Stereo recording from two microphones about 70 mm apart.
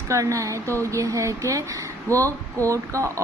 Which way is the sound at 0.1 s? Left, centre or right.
Right.